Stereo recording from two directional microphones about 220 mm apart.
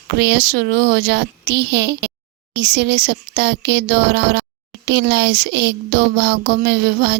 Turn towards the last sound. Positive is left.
turn(degrees=-50)  # may be behind; listen again after turning